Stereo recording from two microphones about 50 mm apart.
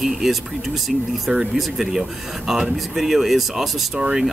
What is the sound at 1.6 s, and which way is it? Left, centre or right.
Speech, centre.